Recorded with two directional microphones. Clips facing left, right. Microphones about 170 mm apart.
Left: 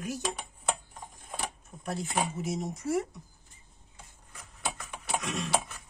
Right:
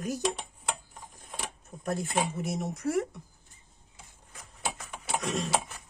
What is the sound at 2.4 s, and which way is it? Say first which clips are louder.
Speech: right 2 dB; 60° right (ahead or behind).